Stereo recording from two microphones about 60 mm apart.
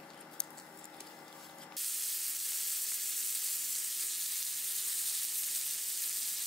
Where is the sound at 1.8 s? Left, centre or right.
Centre.